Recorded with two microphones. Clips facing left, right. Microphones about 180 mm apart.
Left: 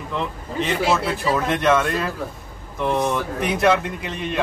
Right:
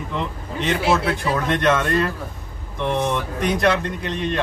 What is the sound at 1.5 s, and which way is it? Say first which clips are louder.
Speech: right 1 dB; centre (ahead or behind).